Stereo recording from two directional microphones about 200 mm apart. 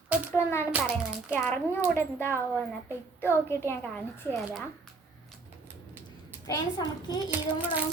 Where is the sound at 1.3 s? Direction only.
10° left (ahead or behind).